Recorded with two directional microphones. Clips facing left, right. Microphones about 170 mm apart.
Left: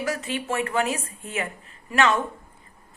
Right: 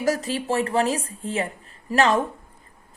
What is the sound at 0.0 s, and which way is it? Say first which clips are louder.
A woman's voice: right 4 dB; 40° right (ahead or behind).